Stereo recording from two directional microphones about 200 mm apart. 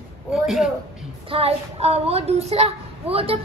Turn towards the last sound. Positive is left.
turn(degrees=-30)  # may be behind; listen again after turning